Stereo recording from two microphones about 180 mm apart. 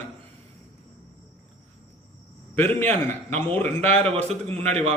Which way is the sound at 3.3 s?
10° left (ahead or behind).